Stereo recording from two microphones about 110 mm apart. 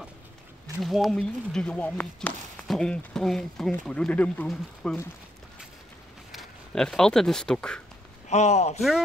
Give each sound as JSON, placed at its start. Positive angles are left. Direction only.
{"t": 0.8, "sound": "speech", "side_deg": 0}
{"t": 6.3, "sound": "speech", "side_deg": 5}
{"t": 8.3, "sound": "speech", "side_deg": 90}